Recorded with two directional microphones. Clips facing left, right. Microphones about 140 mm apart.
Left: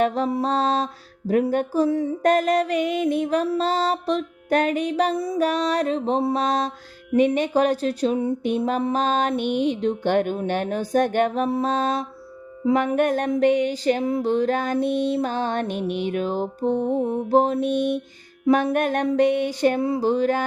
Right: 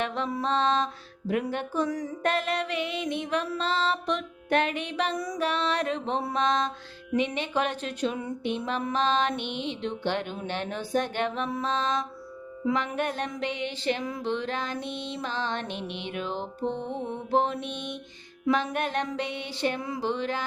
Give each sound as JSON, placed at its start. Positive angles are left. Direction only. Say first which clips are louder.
{"t": 0.0, "sound": "music", "louder": "left 8 dB", "side_deg": 40}
{"t": 2.2, "sound": "music", "louder": "left 8 dB", "side_deg": 40}
{"t": 5.1, "sound": "music", "louder": "left 7 dB", "side_deg": 25}
{"t": 5.4, "sound": "music", "louder": "left 6 dB", "side_deg": 40}
{"t": 8.4, "sound": "music", "louder": "left 5 dB", "side_deg": 45}
{"t": 13.0, "sound": "music", "louder": "left 10 dB", "side_deg": 50}